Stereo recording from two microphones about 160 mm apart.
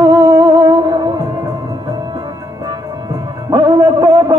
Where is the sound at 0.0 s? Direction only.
20° right (ahead or behind).